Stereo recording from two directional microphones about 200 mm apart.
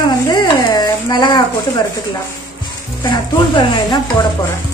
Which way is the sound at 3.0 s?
20° left (ahead or behind).